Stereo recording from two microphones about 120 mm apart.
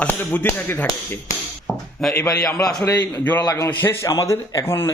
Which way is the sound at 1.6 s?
Centre (ahead or behind).